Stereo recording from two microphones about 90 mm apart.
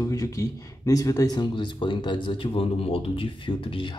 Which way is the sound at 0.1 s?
40° left (ahead or behind).